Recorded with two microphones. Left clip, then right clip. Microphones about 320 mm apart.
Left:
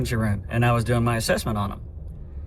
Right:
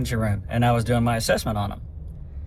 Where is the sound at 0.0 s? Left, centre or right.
Centre.